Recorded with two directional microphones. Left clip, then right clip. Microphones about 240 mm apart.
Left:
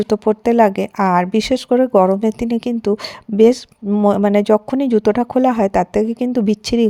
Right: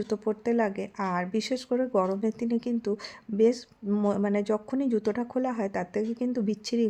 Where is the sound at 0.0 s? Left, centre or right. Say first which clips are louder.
Left 13 dB; left.